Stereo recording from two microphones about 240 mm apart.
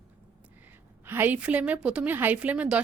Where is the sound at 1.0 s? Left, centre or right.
Centre.